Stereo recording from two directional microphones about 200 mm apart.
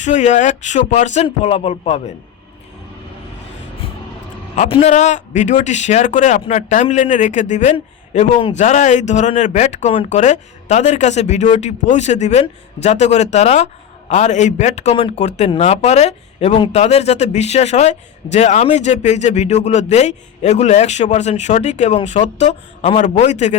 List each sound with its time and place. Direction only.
0.0 s a man's voice: 35° left (ahead or behind)
4.5 s a man's voice: 35° left (ahead or behind)